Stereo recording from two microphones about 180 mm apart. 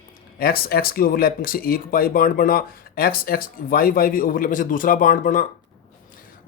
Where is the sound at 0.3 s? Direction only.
55° left (ahead or behind).